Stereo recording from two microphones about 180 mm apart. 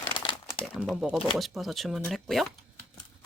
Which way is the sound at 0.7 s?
5° right (ahead or behind).